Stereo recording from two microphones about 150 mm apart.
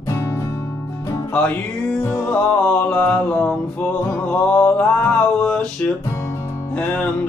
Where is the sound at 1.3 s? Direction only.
10° left (ahead or behind).